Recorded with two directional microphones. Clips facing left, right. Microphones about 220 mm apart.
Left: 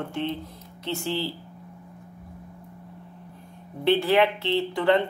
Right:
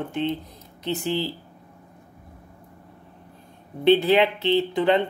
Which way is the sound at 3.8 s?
20° right (ahead or behind).